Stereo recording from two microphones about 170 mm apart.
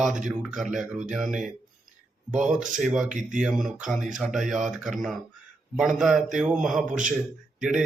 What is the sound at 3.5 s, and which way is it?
Mantra, 5° right (ahead or behind).